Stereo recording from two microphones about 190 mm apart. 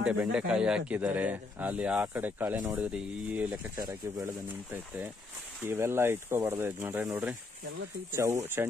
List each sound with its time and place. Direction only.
0.0 s speech: 5° right (ahead or behind)
3.7 s speech: 20° right (ahead or behind)
8.6 s speech: 10° right (ahead or behind)